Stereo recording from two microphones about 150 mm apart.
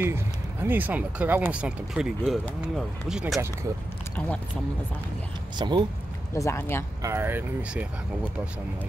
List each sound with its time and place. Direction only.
0.0 s speech: 15° right (ahead or behind)
5.6 s speech: 30° right (ahead or behind)
6.3 s speech: 20° left (ahead or behind)
7.0 s speech: 15° right (ahead or behind)